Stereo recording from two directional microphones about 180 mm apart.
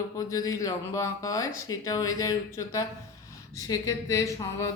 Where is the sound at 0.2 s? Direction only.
20° left (ahead or behind).